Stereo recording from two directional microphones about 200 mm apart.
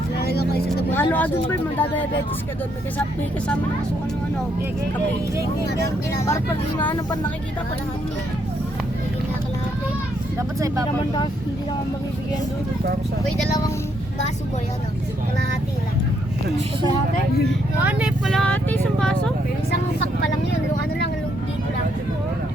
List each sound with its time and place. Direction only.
0.2 s vehicle: 50° left (ahead or behind)
0.9 s speech: 10° left (ahead or behind)
6.2 s speech: 15° left (ahead or behind)
18.3 s speech: 5° left (ahead or behind)